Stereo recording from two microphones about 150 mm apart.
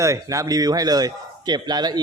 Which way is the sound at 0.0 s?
20° right (ahead or behind).